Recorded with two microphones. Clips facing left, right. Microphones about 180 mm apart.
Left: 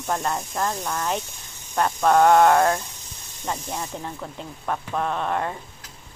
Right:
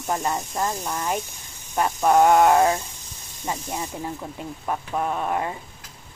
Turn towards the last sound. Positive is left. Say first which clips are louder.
# even
turn(degrees=-5)  # may be behind; listen again after turning